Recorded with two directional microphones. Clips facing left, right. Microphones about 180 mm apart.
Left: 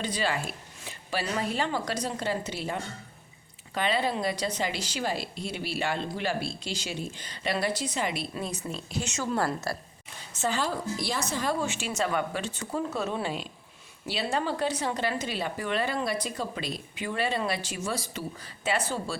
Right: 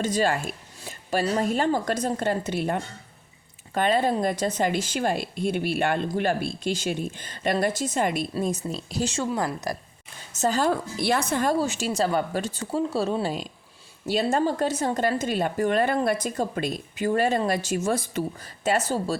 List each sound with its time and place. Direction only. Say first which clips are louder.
0.0 s speech: right 6 dB; 45° right (ahead or behind)
9.7 s speech: right 3 dB; 15° right (ahead or behind)
10.3 s speech: right 5 dB; 40° right (ahead or behind)
10.7 s a woman's voice: right 7 dB; 60° right (ahead or behind)
11.5 s speech: right 6 dB; 40° right (ahead or behind)